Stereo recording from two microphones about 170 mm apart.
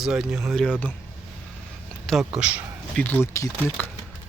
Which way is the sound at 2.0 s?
Centre (ahead or behind).